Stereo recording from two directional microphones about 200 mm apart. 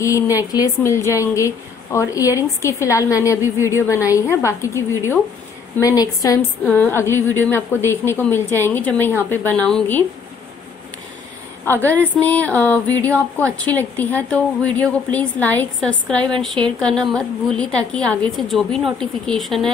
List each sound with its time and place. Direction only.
0.0 s a woman's voice: 15° left (ahead or behind)
11.6 s a woman's voice: 10° left (ahead or behind)